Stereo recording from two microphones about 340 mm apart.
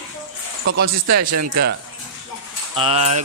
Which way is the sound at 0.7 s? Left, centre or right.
Right.